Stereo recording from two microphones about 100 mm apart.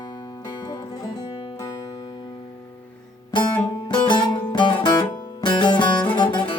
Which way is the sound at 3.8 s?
50° left (ahead or behind).